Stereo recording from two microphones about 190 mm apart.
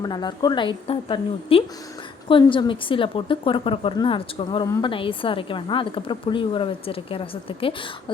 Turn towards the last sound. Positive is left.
turn(degrees=30)  # may be behind; listen again after turning